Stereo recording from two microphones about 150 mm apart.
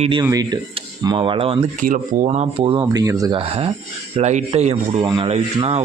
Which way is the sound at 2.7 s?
20° right (ahead or behind).